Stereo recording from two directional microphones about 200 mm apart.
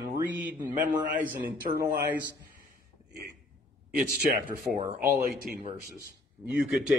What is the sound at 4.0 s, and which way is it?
Speech, 45° right (ahead or behind).